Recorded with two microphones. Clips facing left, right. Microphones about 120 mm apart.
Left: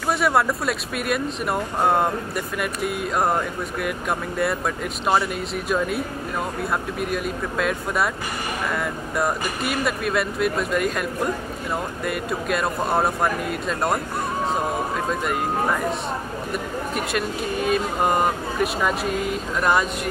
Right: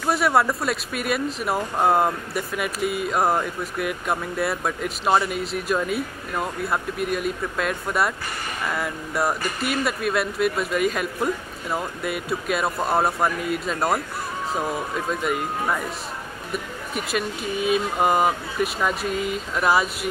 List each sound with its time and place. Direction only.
0.0 s speech: centre (ahead or behind)
15.0 s speech: centre (ahead or behind)